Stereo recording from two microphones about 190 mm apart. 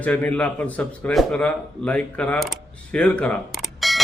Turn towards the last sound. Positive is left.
turn(degrees=0)  # may be behind; listen again after turning